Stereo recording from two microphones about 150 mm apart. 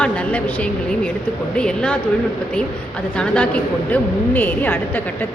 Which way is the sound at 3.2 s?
10° left (ahead or behind).